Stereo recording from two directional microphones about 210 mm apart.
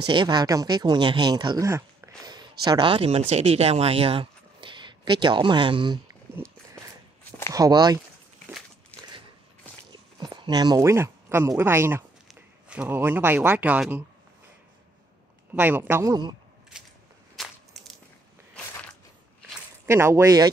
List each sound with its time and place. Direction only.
0.0 s speech: 20° right (ahead or behind)
6.8 s walk: 5° left (ahead or behind)
7.5 s a man's voice: 20° right (ahead or behind)
8.9 s a sound: 5° left (ahead or behind)
10.1 s speech: 20° right (ahead or behind)
15.5 s a man's voice: 10° right (ahead or behind)
16.7 s a sound: 5° right (ahead or behind)
17.4 s crushing: centre (ahead or behind)
19.9 s a man's voice: 15° right (ahead or behind)